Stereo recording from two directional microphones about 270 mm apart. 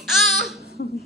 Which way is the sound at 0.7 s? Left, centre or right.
Left.